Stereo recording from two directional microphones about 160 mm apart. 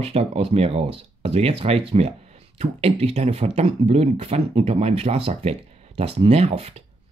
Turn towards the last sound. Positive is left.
turn(degrees=-40)  # may be behind; listen again after turning